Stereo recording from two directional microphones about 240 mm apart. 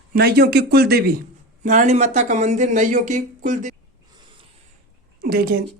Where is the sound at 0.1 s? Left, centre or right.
Right.